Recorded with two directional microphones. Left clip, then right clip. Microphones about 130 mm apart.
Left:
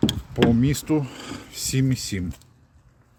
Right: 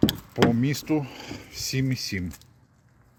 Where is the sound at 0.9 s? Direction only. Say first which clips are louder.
Left 3 dB; 35° left (ahead or behind).